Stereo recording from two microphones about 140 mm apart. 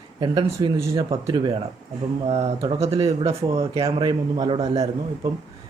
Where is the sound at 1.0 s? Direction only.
35° right (ahead or behind).